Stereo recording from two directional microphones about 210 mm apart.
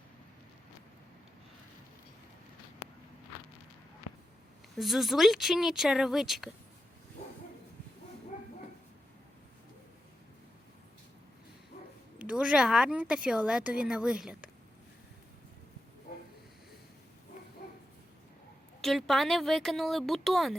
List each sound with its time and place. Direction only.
4.8 s speech: centre (ahead or behind)
12.2 s speech: 5° right (ahead or behind)
17.6 s dog: 40° left (ahead or behind)
18.8 s speech: centre (ahead or behind)